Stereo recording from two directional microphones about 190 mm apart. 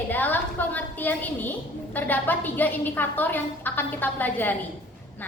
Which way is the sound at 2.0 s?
10° left (ahead or behind).